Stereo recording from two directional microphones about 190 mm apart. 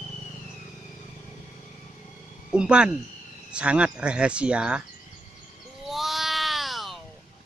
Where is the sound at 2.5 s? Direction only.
5° right (ahead or behind).